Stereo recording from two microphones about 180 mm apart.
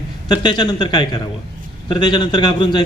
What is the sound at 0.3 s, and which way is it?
A man's voice, 25° left (ahead or behind).